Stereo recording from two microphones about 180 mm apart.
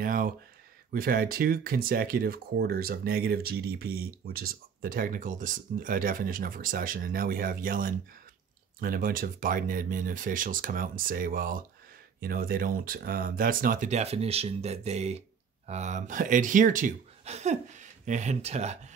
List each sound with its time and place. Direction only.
0.0 s speech: 50° right (ahead or behind)